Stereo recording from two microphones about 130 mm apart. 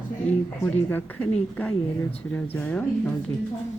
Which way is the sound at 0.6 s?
15° left (ahead or behind).